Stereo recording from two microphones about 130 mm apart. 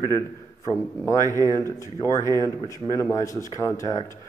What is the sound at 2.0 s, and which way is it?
A man's voice, 30° left (ahead or behind).